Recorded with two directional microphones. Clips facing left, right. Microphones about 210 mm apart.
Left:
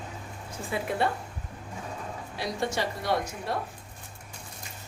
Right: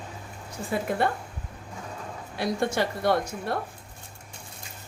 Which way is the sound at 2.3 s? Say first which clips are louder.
Right 4 dB; 55° right (ahead or behind).